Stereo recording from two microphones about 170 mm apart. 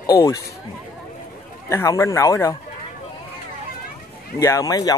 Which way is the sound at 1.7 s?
15° left (ahead or behind).